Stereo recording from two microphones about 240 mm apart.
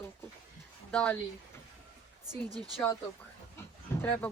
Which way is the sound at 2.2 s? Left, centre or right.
Centre.